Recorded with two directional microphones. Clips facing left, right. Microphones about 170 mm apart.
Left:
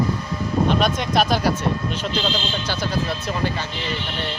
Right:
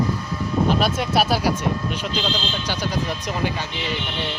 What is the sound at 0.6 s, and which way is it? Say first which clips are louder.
Speech: even; 5° right (ahead or behind).